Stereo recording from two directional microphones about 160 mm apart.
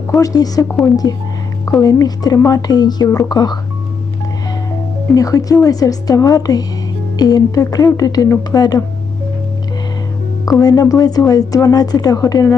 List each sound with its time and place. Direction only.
0.1 s speech: 20° left (ahead or behind)
5.1 s speech: 20° left (ahead or behind)
10.4 s speech: 25° left (ahead or behind)